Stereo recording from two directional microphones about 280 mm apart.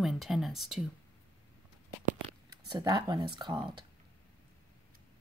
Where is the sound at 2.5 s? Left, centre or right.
Centre.